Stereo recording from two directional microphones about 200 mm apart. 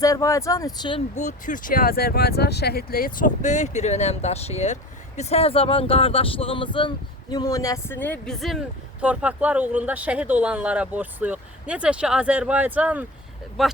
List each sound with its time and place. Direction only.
0.0 s speech: 15° left (ahead or behind)
1.1 s speech: 40° left (ahead or behind); by 13.7 s centre (ahead or behind)